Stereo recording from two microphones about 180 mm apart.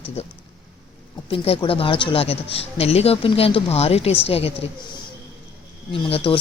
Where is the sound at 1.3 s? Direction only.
30° left (ahead or behind).